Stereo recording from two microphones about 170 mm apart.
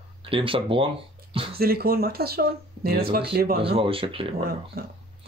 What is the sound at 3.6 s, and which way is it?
Speech, 30° right (ahead or behind).